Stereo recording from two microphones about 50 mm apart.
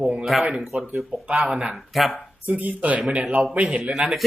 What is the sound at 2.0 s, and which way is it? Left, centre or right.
Speech, centre.